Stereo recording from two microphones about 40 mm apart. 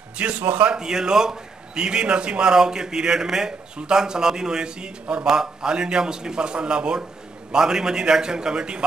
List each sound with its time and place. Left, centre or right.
0.4 s a man's voice: right
0.7 s a man's voice: centre